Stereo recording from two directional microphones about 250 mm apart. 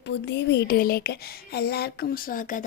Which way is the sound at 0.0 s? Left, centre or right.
Left.